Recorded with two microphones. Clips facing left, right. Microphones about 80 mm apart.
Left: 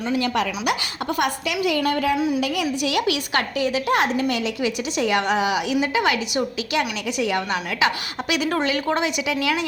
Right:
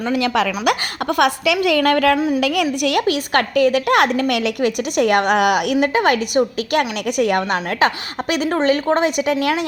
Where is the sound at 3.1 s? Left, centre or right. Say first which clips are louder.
Right 5 dB; right.